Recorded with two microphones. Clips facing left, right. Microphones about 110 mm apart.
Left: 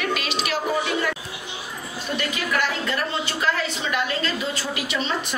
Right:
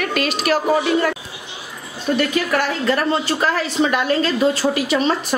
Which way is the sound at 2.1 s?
50° right (ahead or behind).